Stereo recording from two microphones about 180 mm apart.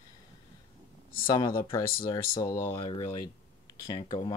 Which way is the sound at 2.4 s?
15° left (ahead or behind).